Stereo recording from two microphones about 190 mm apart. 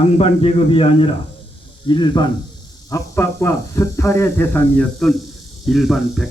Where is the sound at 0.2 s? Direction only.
30° left (ahead or behind).